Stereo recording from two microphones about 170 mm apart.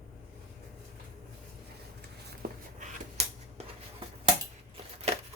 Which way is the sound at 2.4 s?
65° right (ahead or behind).